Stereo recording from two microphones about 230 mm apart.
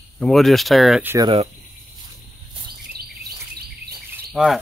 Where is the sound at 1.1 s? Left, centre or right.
Right.